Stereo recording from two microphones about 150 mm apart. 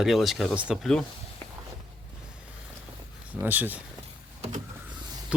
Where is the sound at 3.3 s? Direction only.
10° right (ahead or behind).